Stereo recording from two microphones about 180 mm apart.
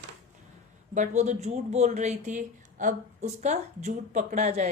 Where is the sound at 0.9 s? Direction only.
40° right (ahead or behind).